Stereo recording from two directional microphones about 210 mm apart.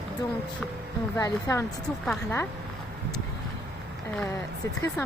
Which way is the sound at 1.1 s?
15° left (ahead or behind).